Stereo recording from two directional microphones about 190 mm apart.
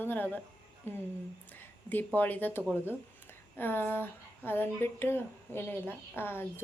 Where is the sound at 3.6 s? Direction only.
10° left (ahead or behind).